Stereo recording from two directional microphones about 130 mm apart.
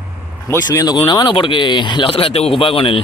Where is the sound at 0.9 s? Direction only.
35° left (ahead or behind).